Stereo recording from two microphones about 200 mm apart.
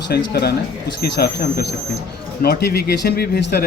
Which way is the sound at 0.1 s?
55° left (ahead or behind).